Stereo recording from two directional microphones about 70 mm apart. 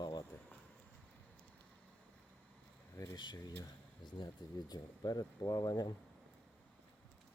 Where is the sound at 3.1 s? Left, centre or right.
Left.